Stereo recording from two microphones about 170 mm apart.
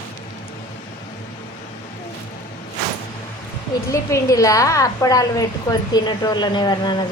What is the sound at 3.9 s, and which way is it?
A woman's voice, 20° left (ahead or behind).